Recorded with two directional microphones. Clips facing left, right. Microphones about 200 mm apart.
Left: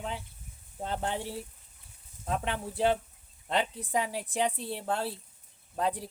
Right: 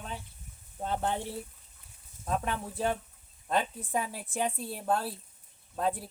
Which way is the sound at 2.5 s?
75° left (ahead or behind).